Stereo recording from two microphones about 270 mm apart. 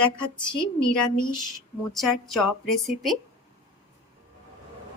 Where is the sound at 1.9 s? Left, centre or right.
Centre.